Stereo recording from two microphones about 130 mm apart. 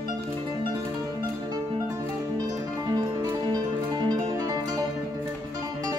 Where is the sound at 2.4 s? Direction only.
25° right (ahead or behind).